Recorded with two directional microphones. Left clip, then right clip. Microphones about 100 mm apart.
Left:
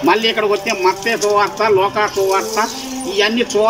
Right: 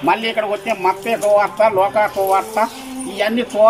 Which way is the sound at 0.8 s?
35° right (ahead or behind).